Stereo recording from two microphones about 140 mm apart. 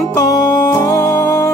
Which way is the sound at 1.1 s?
20° left (ahead or behind).